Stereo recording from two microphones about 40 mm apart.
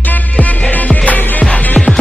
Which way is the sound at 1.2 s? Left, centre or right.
Left.